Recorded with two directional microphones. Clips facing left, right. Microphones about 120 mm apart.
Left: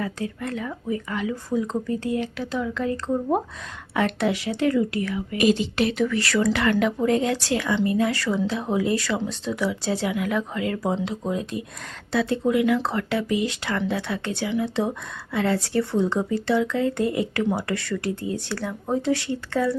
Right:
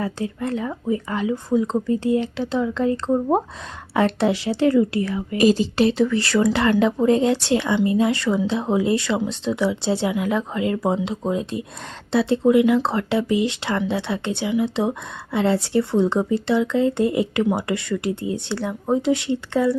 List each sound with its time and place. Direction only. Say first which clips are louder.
0.0 s speech: right 3 dB; 30° right (ahead or behind)